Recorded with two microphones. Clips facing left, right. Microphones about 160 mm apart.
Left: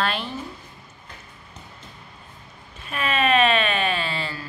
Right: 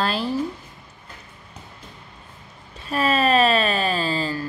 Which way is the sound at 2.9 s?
35° right (ahead or behind).